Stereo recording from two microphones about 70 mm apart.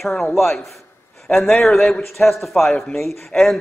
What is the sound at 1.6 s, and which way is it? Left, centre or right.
A man's voice, centre.